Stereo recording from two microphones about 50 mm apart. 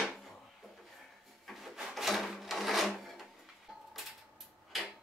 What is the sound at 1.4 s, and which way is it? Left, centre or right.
Wood, centre.